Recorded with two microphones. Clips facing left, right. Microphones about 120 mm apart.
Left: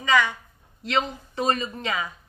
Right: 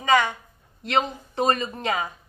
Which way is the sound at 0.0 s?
50° right (ahead or behind).